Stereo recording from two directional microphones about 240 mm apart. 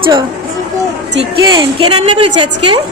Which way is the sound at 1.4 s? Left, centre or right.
Centre.